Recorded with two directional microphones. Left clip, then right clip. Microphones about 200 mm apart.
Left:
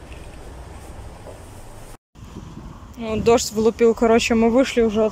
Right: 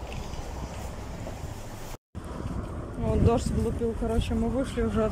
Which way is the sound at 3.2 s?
20° left (ahead or behind).